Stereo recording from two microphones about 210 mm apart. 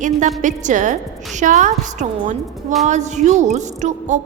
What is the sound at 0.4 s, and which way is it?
A woman's voice, 35° right (ahead or behind).